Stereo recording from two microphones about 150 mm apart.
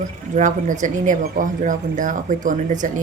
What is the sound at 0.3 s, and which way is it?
Speech, 55° right (ahead or behind).